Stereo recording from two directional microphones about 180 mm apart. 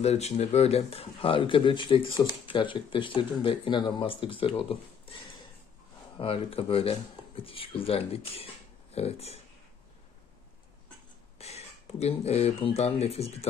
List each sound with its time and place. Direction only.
0.0 s speech: 35° left (ahead or behind)
6.1 s speech: 30° left (ahead or behind)
11.3 s speech: 35° left (ahead or behind)